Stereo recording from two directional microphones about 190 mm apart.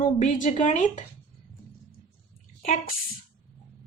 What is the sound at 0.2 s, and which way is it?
Speech, 40° left (ahead or behind).